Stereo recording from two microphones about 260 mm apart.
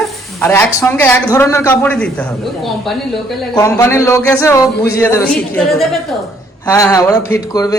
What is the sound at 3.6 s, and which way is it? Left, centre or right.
A man's voice, centre.